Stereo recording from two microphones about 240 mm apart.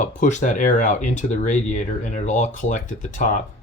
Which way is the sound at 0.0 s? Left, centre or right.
Left.